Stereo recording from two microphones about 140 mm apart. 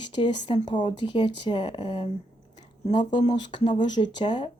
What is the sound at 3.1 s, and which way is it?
Speech, 35° left (ahead or behind).